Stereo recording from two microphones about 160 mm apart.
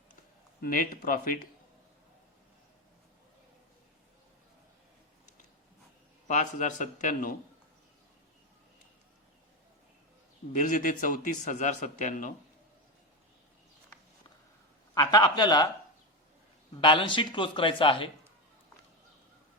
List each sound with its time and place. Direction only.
0.6 s a man's voice: 60° left (ahead or behind)
6.2 s a man's voice: 50° left (ahead or behind)
10.5 s a man's voice: 55° left (ahead or behind)
14.9 s speech: 25° left (ahead or behind)
16.8 s speech: 30° left (ahead or behind)